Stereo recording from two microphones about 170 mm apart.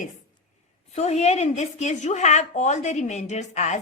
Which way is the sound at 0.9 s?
40° left (ahead or behind).